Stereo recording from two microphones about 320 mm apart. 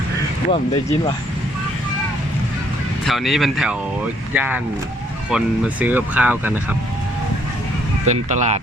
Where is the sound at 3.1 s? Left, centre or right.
Centre.